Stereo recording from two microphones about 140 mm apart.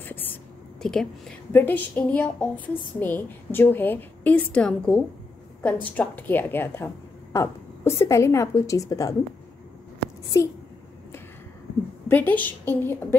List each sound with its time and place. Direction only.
0.0 s whispering: 15° left (ahead or behind)
0.8 s a woman's voice: 5° left (ahead or behind); by 9.1 s 25° left (ahead or behind)
10.3 s a woman's voice: 25° left (ahead or behind)
12.1 s a woman's voice: 10° left (ahead or behind)